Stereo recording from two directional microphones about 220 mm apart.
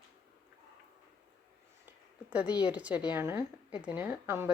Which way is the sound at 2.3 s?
5° right (ahead or behind).